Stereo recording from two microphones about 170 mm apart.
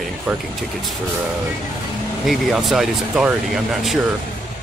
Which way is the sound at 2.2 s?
Centre (ahead or behind).